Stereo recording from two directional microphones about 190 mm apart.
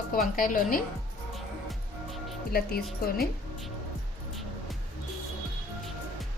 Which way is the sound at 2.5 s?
55° left (ahead or behind).